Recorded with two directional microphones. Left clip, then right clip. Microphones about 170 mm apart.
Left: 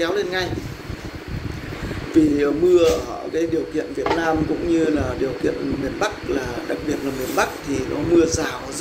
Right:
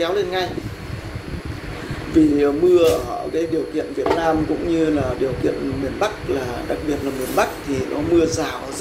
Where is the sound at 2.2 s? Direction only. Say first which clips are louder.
Right 1 dB; 25° left (ahead or behind).